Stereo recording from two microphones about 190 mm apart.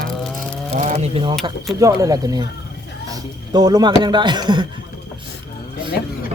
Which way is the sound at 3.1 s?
20° right (ahead or behind).